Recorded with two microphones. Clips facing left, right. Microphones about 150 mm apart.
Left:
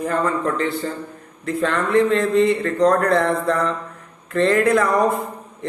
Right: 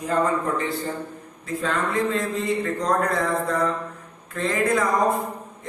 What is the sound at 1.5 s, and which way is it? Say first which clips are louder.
A man's voice: left 5 dB; 65° left (ahead or behind).